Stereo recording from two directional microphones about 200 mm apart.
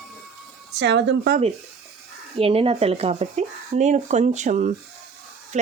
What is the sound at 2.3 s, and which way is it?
Speech, 30° right (ahead or behind).